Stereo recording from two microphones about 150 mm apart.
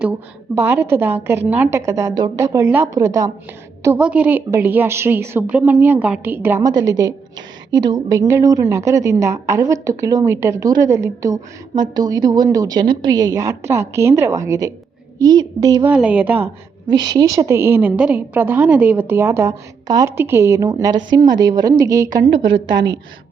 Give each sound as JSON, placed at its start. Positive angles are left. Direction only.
{"t": 0.5, "sound": "a woman's voice", "side_deg": -15}
{"t": 3.9, "sound": "a woman's voice", "side_deg": -10}
{"t": 15.9, "sound": "a woman's voice", "side_deg": -10}
{"t": 16.9, "sound": "a woman's voice", "side_deg": -25}
{"t": 22.3, "sound": "a woman's voice", "side_deg": -30}